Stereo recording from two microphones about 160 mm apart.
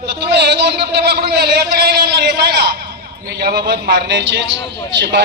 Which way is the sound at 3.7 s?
90° right.